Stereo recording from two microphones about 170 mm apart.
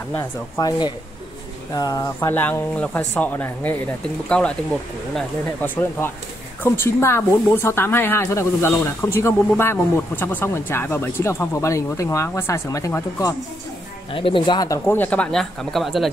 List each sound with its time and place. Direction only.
0.1 s speech: 20° left (ahead or behind)
14.1 s speech: 30° left (ahead or behind); by 16.1 s centre (ahead or behind)